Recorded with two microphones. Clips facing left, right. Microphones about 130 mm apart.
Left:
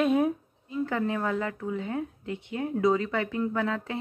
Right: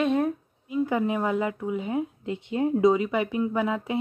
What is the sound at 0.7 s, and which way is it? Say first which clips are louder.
Speech: right 4 dB; 15° right (ahead or behind).